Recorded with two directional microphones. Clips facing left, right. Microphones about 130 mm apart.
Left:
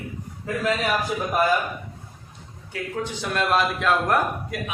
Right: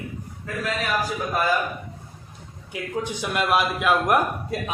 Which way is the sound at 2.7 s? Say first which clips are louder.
Right 1 dB; 15° right (ahead or behind).